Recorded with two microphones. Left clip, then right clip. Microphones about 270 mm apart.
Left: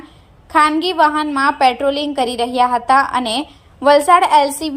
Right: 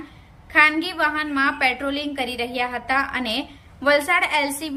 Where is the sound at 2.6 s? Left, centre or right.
Left.